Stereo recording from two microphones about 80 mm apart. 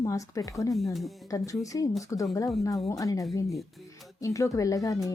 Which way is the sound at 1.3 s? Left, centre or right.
Left.